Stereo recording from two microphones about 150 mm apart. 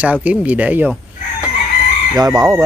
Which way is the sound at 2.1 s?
25° right (ahead or behind).